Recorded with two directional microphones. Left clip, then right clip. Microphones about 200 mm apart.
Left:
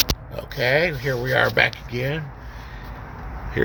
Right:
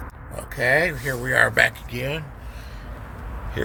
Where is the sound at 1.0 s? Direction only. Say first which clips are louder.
Even; 15° left (ahead or behind).